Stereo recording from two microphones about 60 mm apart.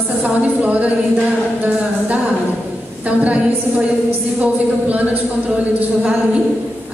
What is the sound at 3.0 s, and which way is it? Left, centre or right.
Speech, right.